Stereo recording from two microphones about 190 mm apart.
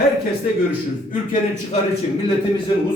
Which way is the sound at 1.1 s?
45° left (ahead or behind).